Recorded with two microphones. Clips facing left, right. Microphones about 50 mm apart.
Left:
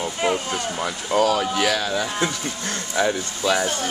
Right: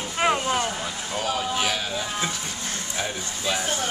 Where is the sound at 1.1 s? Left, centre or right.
Left.